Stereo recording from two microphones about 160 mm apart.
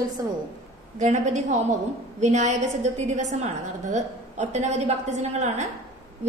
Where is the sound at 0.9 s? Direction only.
50° right (ahead or behind).